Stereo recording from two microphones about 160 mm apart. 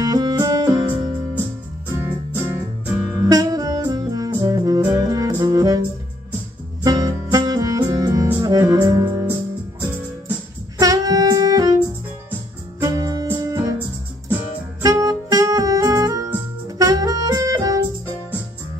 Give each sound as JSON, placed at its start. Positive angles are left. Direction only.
{"t": 0.0, "sound": "music", "side_deg": -25}
{"t": 2.0, "sound": "music", "side_deg": -15}
{"t": 6.8, "sound": "music", "side_deg": -20}
{"t": 10.8, "sound": "music", "side_deg": -20}
{"t": 12.8, "sound": "music", "side_deg": -20}
{"t": 14.8, "sound": "music", "side_deg": -20}